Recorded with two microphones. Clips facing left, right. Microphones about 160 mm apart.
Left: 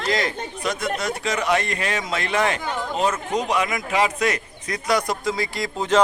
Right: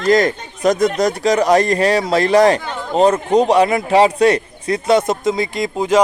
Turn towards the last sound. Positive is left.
turn(degrees=-15)  # may be behind; listen again after turning